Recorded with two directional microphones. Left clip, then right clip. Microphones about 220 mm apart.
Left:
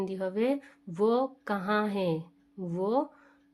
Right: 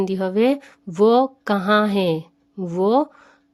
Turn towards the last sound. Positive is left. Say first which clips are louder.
# right 11 dB
turn(degrees=-40)  # may be behind; listen again after turning